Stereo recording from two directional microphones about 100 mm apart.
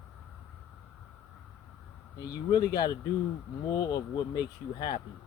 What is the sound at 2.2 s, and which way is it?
Speech, 40° left (ahead or behind).